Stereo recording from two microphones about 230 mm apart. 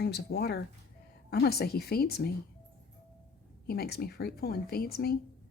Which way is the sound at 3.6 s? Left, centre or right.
Left.